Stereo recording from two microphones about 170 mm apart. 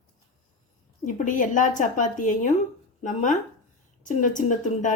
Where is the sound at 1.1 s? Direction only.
50° left (ahead or behind).